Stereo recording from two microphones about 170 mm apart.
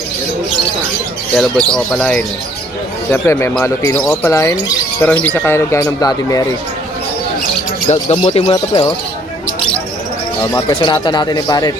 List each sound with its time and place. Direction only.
1.4 s speech: 5° left (ahead or behind); by 6.4 s 20° left (ahead or behind)
7.9 s speech: 40° left (ahead or behind)
8.4 s speech: 25° left (ahead or behind)
10.4 s speech: 20° left (ahead or behind)